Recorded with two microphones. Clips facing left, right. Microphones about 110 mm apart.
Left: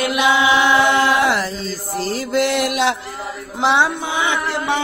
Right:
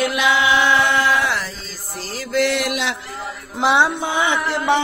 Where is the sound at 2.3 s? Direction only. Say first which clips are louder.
Even; 20° left (ahead or behind).